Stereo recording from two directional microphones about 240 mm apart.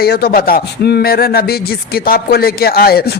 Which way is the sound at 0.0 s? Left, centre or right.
Left.